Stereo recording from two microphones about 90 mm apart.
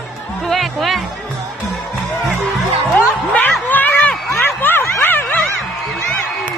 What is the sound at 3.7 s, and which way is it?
Run, 20° left (ahead or behind).